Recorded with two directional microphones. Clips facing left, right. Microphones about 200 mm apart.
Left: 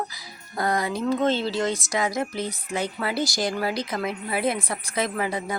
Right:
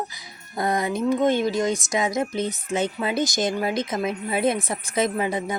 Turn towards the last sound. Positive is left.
turn(degrees=-20)  # may be behind; listen again after turning